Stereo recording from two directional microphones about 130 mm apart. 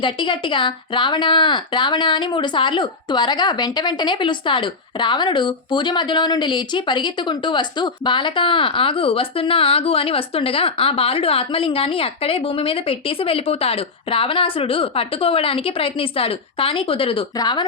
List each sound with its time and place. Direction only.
0.0 s speech: 40° left (ahead or behind)